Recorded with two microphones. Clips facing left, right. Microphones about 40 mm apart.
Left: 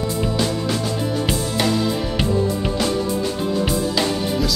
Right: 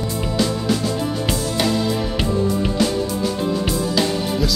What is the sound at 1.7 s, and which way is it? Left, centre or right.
Music, centre.